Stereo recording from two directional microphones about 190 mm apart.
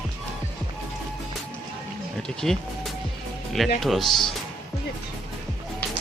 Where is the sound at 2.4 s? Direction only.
Centre (ahead or behind).